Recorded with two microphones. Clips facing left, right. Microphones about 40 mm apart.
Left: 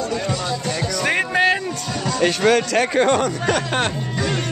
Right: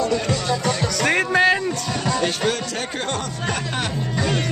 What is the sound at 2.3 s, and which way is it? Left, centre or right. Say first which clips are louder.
Speech: left 7 dB; left.